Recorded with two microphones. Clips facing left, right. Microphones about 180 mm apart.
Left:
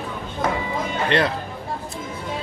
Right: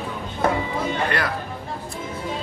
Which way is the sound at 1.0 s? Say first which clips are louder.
Left 4 dB; 25° left (ahead or behind).